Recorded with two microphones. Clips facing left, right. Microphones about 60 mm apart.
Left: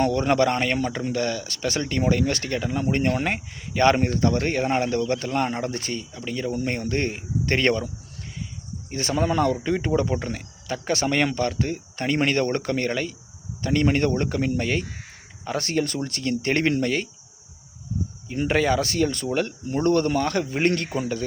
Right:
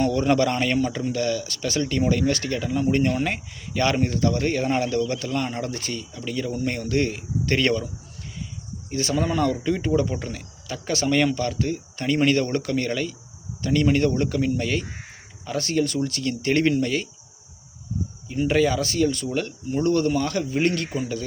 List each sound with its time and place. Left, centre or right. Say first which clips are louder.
0.0 s speech: even; left
8.9 s speech: even; left
18.3 s speech: right 1 dB; left